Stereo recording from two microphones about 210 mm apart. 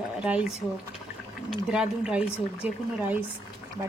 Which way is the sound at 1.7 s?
5° right (ahead or behind).